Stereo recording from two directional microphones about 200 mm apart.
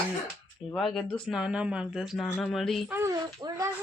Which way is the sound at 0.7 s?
Centre (ahead or behind).